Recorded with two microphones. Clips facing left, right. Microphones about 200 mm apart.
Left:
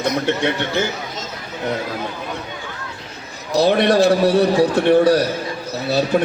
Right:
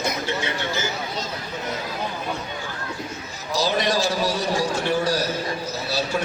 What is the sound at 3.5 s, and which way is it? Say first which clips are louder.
A man's voice: left 8 dB; 60° left (ahead or behind).